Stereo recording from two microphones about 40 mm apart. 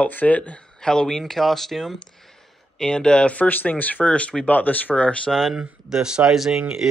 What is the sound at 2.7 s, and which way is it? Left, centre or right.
Speech, centre.